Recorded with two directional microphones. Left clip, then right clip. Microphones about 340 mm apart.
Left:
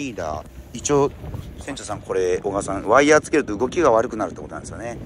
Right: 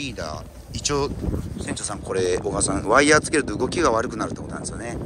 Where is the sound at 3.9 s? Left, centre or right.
Centre.